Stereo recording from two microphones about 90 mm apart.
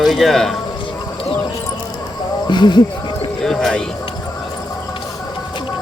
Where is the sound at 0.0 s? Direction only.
Centre (ahead or behind).